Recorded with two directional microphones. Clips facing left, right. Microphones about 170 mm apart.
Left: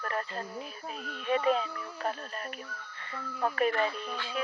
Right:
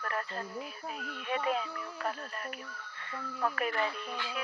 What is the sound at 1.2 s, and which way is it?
Speech, 25° left (ahead or behind).